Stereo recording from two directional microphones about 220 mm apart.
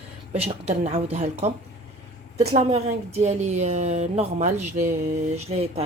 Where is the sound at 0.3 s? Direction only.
30° right (ahead or behind).